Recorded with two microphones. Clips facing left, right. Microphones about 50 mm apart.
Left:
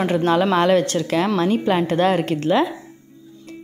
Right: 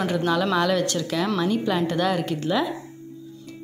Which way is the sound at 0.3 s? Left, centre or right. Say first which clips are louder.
Left 6 dB; left.